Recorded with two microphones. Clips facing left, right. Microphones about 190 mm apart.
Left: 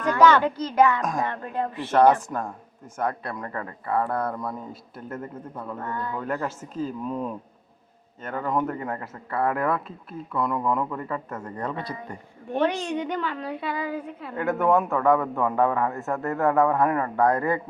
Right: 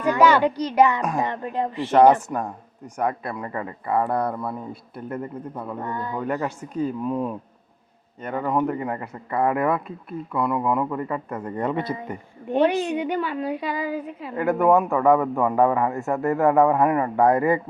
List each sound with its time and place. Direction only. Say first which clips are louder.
0.0 s a child's voice: right 1 dB; 10° right (ahead or behind)
6.2 s speech: right 3 dB; centre (ahead or behind)
15.0 s speech: right 3 dB; centre (ahead or behind)
15.4 s speech: right 3 dB; 15° right (ahead or behind)